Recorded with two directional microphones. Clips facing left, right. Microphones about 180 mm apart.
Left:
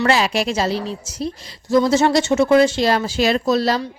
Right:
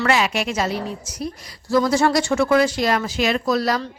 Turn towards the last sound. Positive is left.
turn(degrees=25)  # may be behind; listen again after turning